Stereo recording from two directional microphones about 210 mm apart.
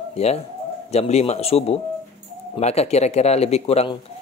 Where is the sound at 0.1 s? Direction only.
30° left (ahead or behind).